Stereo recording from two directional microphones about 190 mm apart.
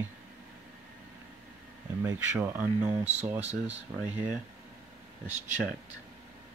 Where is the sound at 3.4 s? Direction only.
35° right (ahead or behind).